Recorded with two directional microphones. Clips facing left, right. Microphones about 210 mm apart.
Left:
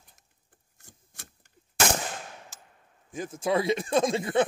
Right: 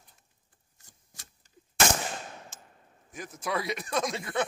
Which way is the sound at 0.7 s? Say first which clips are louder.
Left 6 dB; 55° left (ahead or behind).